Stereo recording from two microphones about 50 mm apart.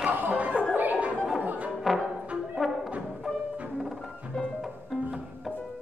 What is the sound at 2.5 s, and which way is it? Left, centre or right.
Music, centre.